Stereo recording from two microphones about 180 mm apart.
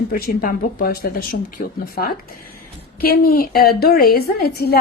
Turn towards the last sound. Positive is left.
turn(degrees=60)  # may be behind; listen again after turning